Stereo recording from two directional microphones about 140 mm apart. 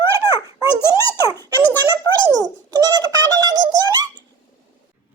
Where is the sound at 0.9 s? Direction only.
25° right (ahead or behind).